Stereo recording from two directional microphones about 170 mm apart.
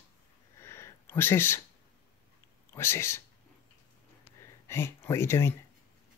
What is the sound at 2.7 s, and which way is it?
Speech, 15° left (ahead or behind).